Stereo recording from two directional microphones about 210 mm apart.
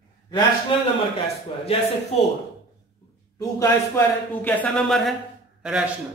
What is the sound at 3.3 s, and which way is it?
A man's voice, 15° left (ahead or behind).